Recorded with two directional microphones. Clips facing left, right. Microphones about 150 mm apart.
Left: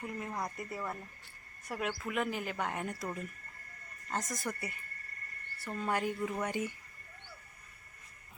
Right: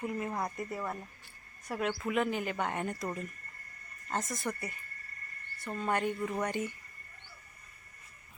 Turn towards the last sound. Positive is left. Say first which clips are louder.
# right 1 dB
turn(degrees=10)  # may be behind; listen again after turning